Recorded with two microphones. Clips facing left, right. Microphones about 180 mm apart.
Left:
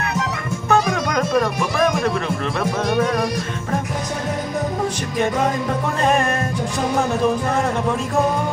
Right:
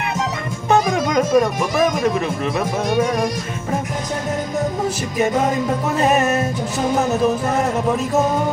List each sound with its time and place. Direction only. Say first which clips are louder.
0.7 s music: right 2 dB; 15° right (ahead or behind)
6.0 s music: right 1 dB; 5° right (ahead or behind)